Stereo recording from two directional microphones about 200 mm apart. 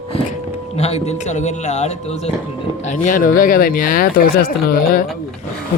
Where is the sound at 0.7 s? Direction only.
30° left (ahead or behind).